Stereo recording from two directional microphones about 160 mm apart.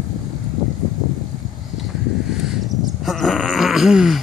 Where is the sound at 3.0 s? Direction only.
Centre (ahead or behind).